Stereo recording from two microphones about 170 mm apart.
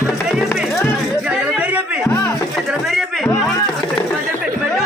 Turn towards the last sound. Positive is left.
turn(degrees=30)  # may be behind; listen again after turning